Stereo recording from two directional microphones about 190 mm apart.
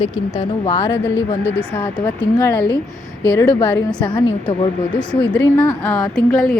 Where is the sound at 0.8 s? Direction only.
15° left (ahead or behind).